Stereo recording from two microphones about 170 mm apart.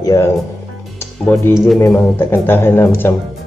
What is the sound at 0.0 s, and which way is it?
Speech, 20° left (ahead or behind).